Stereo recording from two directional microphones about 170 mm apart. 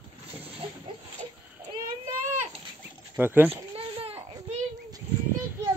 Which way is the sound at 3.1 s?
10° right (ahead or behind).